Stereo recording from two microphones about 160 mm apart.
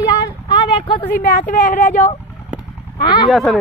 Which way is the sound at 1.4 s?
55° left (ahead or behind).